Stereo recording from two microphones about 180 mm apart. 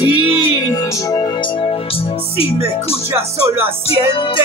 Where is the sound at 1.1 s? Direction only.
25° left (ahead or behind).